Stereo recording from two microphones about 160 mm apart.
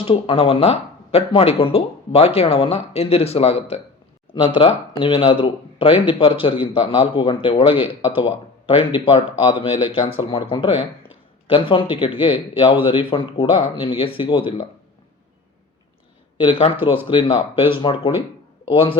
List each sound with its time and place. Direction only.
0.0 s speech: 35° left (ahead or behind)
16.4 s speech: 35° left (ahead or behind)